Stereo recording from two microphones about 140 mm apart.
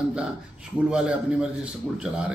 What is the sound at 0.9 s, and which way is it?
Speech, 5° right (ahead or behind).